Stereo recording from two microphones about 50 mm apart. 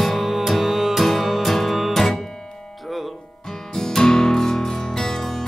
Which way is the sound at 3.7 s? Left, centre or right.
Centre.